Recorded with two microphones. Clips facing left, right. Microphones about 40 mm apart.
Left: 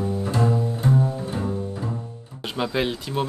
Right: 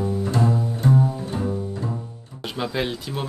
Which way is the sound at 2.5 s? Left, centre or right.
Centre.